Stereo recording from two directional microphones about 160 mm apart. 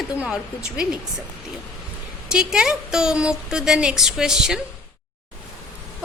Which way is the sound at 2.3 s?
5° right (ahead or behind).